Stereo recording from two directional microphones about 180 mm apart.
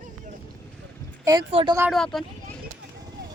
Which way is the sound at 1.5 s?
30° right (ahead or behind).